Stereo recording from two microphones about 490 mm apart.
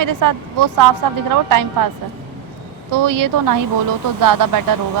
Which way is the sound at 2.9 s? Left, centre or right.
Right.